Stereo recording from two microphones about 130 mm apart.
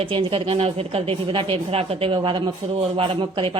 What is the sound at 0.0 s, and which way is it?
A woman's voice, 45° right (ahead or behind).